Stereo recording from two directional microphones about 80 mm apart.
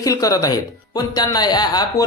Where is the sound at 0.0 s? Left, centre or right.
Left.